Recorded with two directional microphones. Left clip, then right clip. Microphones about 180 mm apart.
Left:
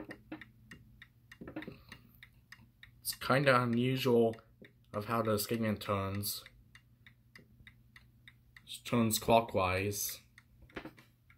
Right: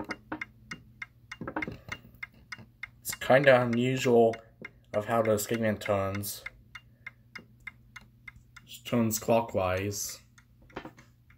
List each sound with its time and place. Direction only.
3.2 s speech: 20° left (ahead or behind)
8.9 s speech: 10° left (ahead or behind)